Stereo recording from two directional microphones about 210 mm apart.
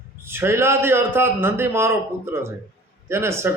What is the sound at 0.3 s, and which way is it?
A man's voice, 10° right (ahead or behind).